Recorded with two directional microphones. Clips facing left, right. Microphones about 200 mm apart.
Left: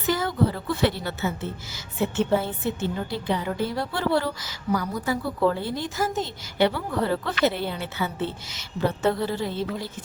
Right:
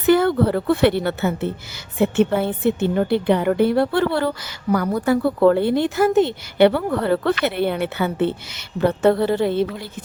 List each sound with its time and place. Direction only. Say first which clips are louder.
0.0 s a woman's voice: right 8 dB; 60° right (ahead or behind)